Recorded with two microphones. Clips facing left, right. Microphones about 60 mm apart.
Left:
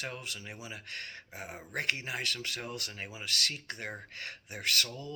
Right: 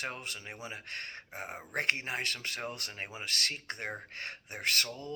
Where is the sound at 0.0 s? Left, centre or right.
Right.